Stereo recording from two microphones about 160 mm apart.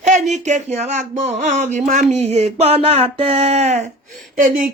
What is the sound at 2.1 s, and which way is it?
Music, 40° right (ahead or behind).